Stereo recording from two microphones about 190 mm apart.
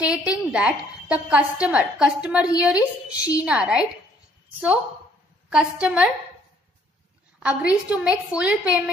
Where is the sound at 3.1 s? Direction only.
20° left (ahead or behind).